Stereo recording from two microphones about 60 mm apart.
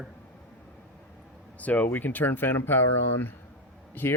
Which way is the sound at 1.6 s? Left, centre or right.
Left.